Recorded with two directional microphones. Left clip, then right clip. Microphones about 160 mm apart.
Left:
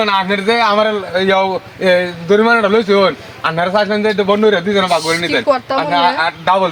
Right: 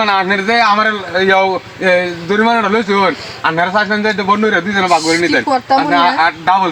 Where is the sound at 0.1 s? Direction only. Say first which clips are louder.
Right 1 dB; 50° left (ahead or behind).